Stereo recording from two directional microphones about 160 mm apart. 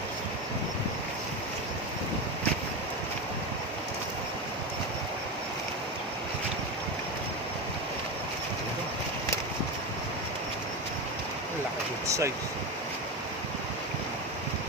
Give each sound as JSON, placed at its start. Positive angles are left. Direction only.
{"t": 12.0, "sound": "vehicle", "side_deg": -20}